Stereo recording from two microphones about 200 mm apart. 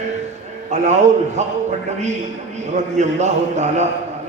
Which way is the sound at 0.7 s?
35° right (ahead or behind).